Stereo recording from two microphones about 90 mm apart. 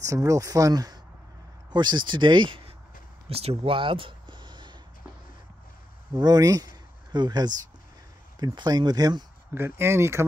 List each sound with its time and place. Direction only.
0.0 s speech: 40° right (ahead or behind); by 2.7 s 65° right (ahead or behind)
3.3 s a sound: 85° right; by 4.7 s 60° right (ahead or behind)
6.1 s speech: 50° right (ahead or behind)
8.5 s speech: 50° right (ahead or behind)
9.5 s speech: 25° right (ahead or behind)